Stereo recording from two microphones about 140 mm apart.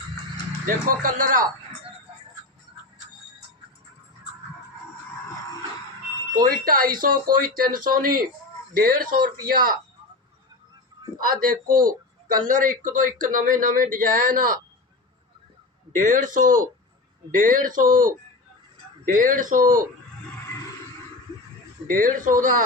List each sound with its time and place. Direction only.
0.9 s speech: 75° right (ahead or behind)
6.3 s speech: 90° right
11.2 s speech: 85° right
12.5 s speech: 70° right (ahead or behind)
16.0 s speech: 65° right (ahead or behind)
21.8 s speech: 75° right (ahead or behind)